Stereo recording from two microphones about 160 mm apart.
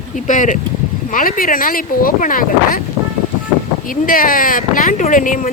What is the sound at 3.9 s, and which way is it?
Speech, 60° left (ahead or behind).